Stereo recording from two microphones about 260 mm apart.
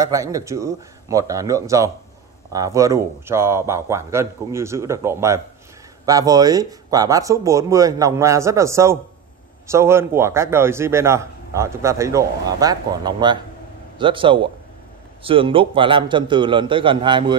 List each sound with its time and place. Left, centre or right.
0.0 s a man's voice: centre